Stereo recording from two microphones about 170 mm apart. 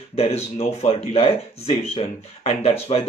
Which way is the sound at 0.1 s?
35° left (ahead or behind).